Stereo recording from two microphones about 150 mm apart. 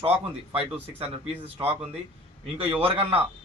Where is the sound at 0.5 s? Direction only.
40° right (ahead or behind).